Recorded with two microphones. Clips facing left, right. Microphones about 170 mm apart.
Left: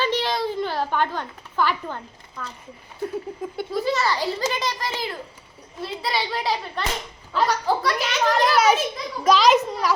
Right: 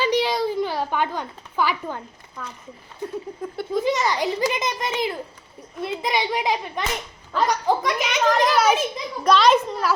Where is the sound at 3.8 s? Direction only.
15° right (ahead or behind).